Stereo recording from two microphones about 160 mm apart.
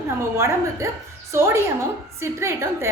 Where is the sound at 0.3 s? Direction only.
15° right (ahead or behind).